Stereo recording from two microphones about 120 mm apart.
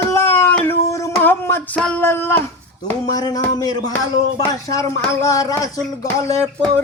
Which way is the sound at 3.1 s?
30° left (ahead or behind).